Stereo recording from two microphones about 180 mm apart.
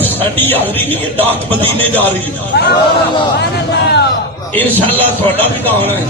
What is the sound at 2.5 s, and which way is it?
A man's voice, 65° left (ahead or behind).